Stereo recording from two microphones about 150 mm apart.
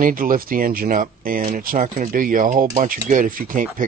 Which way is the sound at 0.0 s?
70° right (ahead or behind).